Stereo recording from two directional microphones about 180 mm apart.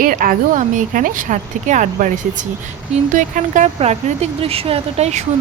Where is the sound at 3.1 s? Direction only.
45° right (ahead or behind).